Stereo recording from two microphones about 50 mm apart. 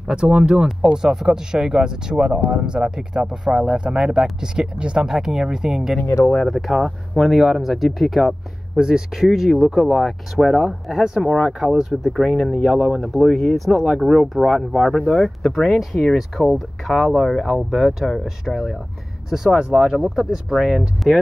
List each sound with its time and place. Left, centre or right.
0.0 s speech: centre
6.4 s speech: centre
8.7 s speech: centre
13.7 s speech: centre
16.2 s speech: centre